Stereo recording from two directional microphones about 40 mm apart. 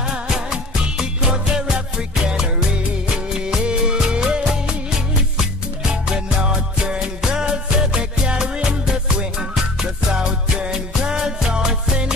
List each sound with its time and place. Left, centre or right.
0.5 s music: right
3.4 s music: centre
6.0 s music: centre
10.1 s music: centre